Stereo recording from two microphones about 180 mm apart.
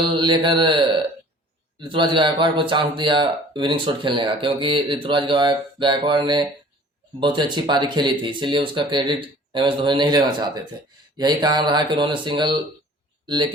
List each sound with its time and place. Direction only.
0.0 s speech: 25° right (ahead or behind)